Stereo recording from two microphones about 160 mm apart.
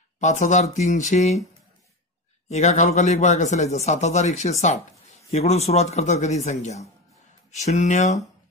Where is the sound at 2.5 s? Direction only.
45° left (ahead or behind).